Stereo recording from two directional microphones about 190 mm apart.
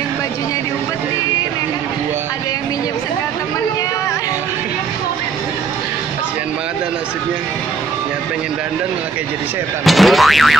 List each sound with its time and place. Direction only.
9.8 s speech: centre (ahead or behind)